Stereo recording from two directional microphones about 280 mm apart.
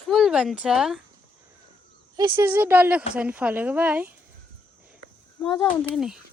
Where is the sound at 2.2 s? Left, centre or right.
Centre.